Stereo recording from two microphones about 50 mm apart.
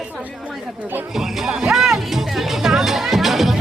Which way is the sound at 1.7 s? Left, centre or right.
Centre.